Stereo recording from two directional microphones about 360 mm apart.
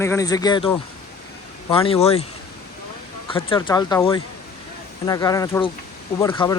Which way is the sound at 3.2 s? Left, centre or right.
Centre.